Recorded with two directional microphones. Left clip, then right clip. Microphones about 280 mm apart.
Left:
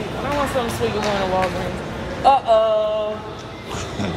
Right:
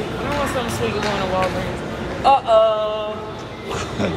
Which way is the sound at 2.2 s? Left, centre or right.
Left.